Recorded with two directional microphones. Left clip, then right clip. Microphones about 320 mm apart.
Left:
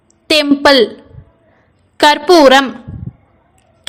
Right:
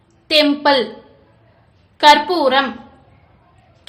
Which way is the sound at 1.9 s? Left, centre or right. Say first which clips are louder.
Left 3 dB; left.